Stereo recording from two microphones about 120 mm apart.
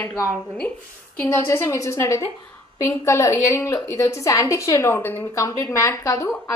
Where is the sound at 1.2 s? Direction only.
20° left (ahead or behind).